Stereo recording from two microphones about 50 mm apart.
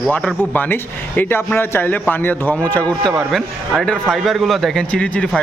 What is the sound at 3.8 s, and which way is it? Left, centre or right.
Speech, centre.